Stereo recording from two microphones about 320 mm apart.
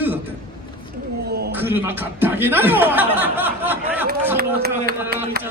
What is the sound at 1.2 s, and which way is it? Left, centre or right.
Speech, right.